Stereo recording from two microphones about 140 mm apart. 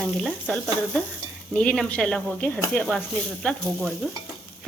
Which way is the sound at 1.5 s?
5° left (ahead or behind).